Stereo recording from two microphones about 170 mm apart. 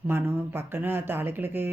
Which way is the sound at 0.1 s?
15° right (ahead or behind).